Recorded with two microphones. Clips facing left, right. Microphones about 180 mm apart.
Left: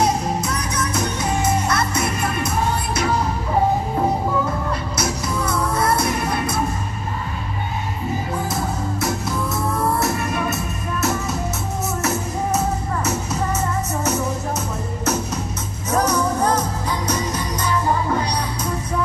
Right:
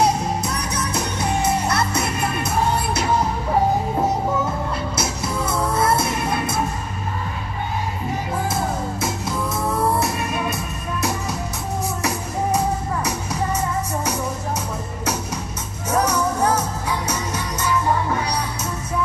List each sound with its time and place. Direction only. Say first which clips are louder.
0.4 s music: left 1 dB; 30° right (ahead or behind)
4.9 s music: left 1 dB; 25° right (ahead or behind)
12.0 s music: left 1 dB; 15° right (ahead or behind)
15.9 s music: left 1 dB; 10° right (ahead or behind)